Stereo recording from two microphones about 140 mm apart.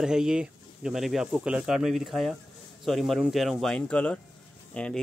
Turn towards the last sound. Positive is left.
turn(degrees=5)  # may be behind; listen again after turning